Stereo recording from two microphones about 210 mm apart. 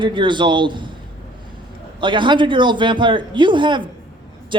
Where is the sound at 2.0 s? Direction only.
20° right (ahead or behind).